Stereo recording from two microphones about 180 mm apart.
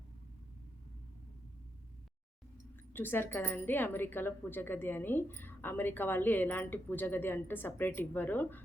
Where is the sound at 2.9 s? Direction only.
10° left (ahead or behind).